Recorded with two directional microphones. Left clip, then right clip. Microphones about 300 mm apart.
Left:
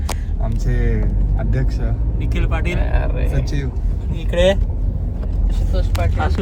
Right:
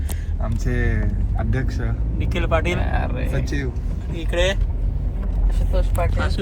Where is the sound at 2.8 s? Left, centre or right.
Centre.